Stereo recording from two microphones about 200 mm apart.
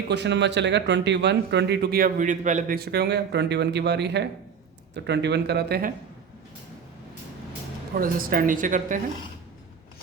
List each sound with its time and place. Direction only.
0.1 s speech: 60° right (ahead or behind)
7.9 s speech: 45° right (ahead or behind)